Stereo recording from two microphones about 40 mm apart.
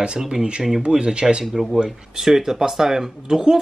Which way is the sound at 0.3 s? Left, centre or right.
Right.